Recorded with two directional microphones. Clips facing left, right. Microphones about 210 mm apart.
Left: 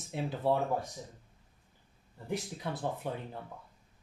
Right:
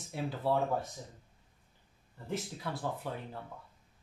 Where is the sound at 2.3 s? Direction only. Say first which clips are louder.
Left 1 dB; 20° left (ahead or behind).